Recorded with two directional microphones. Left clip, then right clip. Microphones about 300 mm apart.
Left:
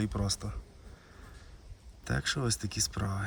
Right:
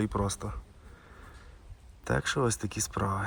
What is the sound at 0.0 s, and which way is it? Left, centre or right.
Speech, centre.